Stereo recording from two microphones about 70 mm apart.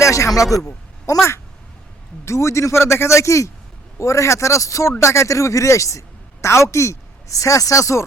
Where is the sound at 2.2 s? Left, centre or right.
Left.